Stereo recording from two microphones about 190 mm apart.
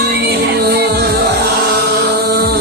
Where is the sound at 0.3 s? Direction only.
60° right (ahead or behind).